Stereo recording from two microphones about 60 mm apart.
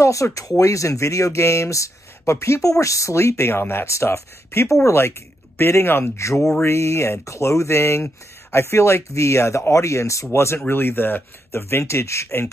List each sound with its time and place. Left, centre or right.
0.0 s speech: left
3.9 s speech: left
6.1 s speech: left
10.3 s speech: left
11.5 s speech: left